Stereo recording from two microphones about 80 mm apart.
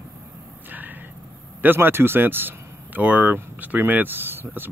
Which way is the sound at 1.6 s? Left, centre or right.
Right.